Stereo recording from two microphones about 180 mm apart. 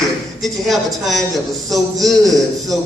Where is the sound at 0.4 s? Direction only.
Centre (ahead or behind).